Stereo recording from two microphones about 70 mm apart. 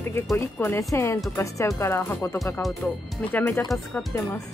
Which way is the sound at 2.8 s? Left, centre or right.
Left.